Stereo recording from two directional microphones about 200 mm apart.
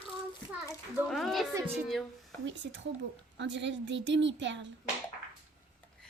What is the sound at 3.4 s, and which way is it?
A woman's voice, 65° right (ahead or behind).